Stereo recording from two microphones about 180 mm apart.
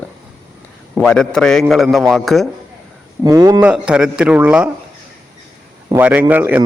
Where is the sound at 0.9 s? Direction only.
5° left (ahead or behind).